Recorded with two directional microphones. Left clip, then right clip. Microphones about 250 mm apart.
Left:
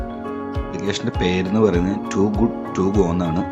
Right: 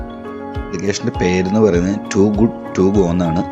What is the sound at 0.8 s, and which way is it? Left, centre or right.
Speech, centre.